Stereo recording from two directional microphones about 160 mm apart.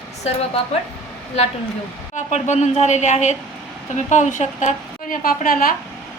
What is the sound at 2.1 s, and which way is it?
A woman's voice, 45° left (ahead or behind).